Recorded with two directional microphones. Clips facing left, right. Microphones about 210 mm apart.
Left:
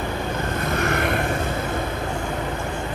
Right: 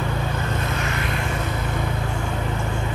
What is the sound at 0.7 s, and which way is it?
Vehicle, 55° left (ahead or behind).